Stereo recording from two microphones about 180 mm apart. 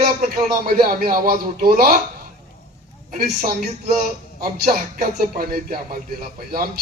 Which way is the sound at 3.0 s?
55° right (ahead or behind).